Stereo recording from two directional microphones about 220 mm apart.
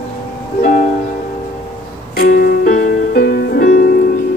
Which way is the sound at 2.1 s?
40° left (ahead or behind).